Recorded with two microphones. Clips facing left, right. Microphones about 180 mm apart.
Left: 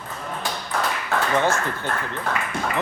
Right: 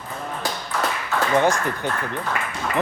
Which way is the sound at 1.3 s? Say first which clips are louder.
Right 4 dB; 15° right (ahead or behind).